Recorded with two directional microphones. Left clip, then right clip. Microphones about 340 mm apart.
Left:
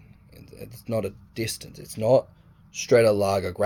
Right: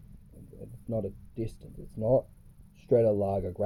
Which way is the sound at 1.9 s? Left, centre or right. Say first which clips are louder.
Left 6 dB; left.